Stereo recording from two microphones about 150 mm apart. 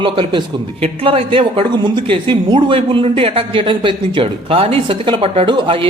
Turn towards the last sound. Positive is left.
turn(degrees=-35)  # may be behind; listen again after turning